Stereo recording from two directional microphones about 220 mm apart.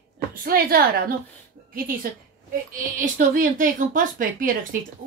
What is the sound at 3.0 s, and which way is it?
A woman's voice, 40° right (ahead or behind).